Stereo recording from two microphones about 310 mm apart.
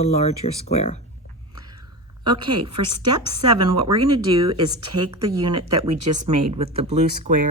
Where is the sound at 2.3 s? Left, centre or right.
Centre.